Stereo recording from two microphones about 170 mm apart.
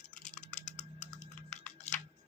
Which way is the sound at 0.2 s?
45° left (ahead or behind).